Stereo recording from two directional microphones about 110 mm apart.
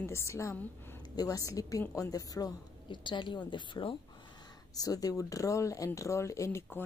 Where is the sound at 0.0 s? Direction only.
25° left (ahead or behind).